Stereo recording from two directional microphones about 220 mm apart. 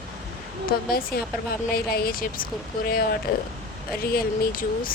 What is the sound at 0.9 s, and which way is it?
Speech, 40° left (ahead or behind).